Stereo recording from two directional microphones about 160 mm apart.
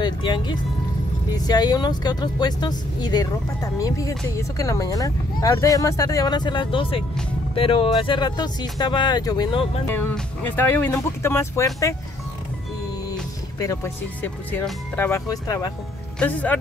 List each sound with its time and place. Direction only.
0.0 s music: 30° left (ahead or behind)
1.3 s speech: 25° left (ahead or behind)
9.8 s speech: 10° left (ahead or behind)
13.6 s speech: 20° left (ahead or behind)
16.2 s speech: 10° left (ahead or behind)